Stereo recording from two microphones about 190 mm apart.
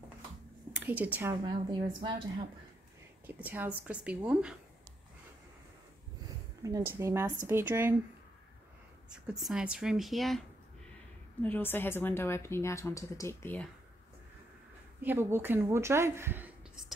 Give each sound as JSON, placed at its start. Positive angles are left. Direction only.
{"t": 0.7, "sound": "a woman's voice", "side_deg": -10}
{"t": 1.3, "sound": "a woman's voice", "side_deg": -25}
{"t": 3.3, "sound": "a woman's voice", "side_deg": -10}
{"t": 6.6, "sound": "a woman's voice", "side_deg": -15}
{"t": 9.3, "sound": "speech", "side_deg": -5}
{"t": 11.4, "sound": "speech", "side_deg": 10}
{"t": 15.0, "sound": "speech", "side_deg": -10}